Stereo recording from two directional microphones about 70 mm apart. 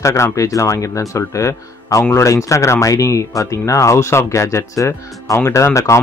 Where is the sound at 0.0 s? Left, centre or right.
Left.